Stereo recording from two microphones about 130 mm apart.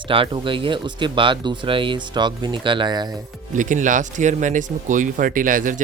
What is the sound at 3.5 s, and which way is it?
Speech, 75° right (ahead or behind).